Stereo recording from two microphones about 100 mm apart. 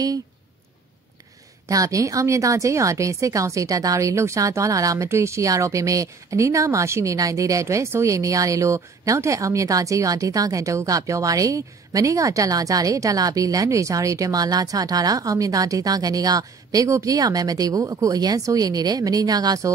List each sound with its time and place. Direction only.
1.7 s speech: 35° right (ahead or behind)